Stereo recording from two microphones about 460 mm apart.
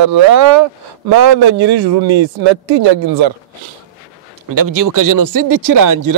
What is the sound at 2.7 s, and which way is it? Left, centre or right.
Speech, right.